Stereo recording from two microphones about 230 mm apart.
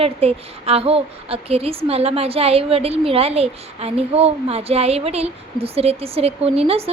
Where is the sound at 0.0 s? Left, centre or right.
Right.